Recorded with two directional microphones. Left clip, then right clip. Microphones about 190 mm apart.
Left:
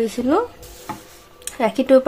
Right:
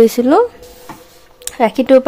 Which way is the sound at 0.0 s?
45° right (ahead or behind).